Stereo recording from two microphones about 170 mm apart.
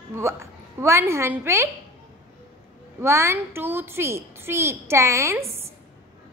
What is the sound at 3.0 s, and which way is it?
A child's voice, 15° right (ahead or behind).